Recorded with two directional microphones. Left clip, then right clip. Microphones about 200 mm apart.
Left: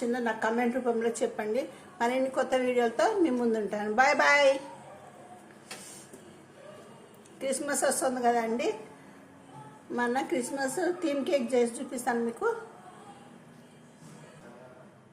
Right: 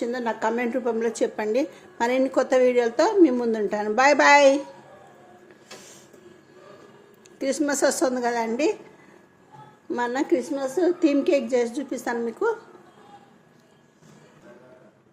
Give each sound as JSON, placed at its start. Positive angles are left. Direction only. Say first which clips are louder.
{"t": 0.1, "sound": "speech", "louder": "right 4 dB", "side_deg": -40}
{"t": 7.3, "sound": "a woman's voice", "louder": "right 7 dB", "side_deg": -40}
{"t": 9.9, "sound": "speech", "louder": "right 5 dB", "side_deg": -35}